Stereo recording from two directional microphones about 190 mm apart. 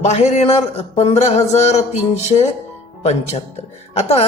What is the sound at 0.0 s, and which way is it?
A man's voice, 35° left (ahead or behind).